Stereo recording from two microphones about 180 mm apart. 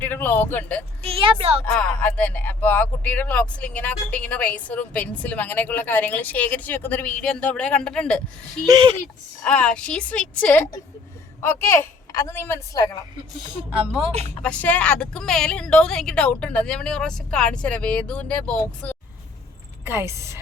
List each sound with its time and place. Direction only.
0.0 s speech: 10° left (ahead or behind)
1.0 s a woman's voice: 30° right (ahead or behind)
1.6 s a woman's voice: 10° left (ahead or behind)
8.6 s speech: 25° right (ahead or behind)
9.4 s speech: 5° left (ahead or behind)
14.1 s speech: 35° right (ahead or behind)
14.4 s a woman's voice: 5° left (ahead or behind)
19.8 s a woman's voice: 10° right (ahead or behind)